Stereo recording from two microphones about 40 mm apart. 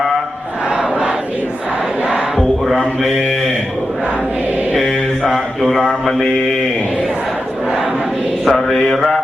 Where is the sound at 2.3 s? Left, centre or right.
Centre.